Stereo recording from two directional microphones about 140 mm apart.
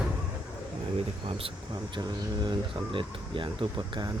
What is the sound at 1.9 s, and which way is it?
Speech, 30° right (ahead or behind).